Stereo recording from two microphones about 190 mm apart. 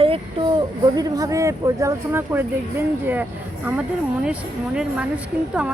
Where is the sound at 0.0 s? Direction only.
30° right (ahead or behind).